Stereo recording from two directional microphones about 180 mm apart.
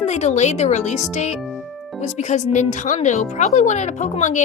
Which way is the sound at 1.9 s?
40° left (ahead or behind).